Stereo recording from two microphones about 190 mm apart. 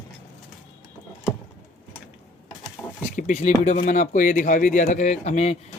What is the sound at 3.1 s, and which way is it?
Speech, 40° left (ahead or behind).